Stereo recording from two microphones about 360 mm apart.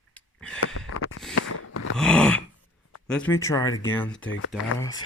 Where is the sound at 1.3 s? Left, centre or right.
Left.